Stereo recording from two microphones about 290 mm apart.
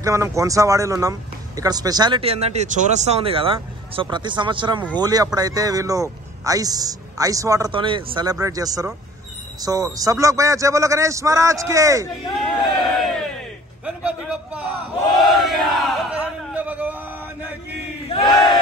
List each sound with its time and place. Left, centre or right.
0.0 s speech: centre
12.4 s crowd: centre
13.8 s a sound: centre
15.1 s battle cry: centre
18.1 s battle cry: centre